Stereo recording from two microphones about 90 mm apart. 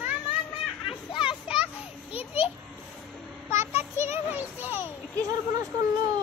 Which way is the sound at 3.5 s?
30° right (ahead or behind).